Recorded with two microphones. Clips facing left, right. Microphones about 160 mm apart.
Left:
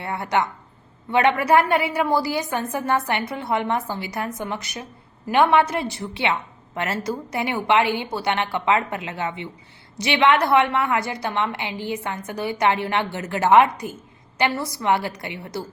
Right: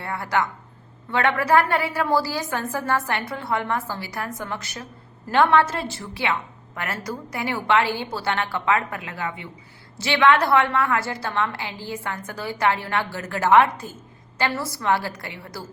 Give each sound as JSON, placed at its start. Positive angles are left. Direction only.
{"t": 0.0, "sound": "a woman's voice", "side_deg": 20}